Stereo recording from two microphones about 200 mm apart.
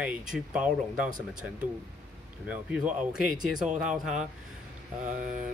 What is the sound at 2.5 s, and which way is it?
Speech, 5° right (ahead or behind).